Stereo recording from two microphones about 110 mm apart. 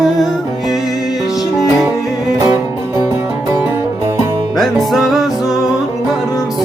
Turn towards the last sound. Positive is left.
turn(degrees=0)  # may be behind; listen again after turning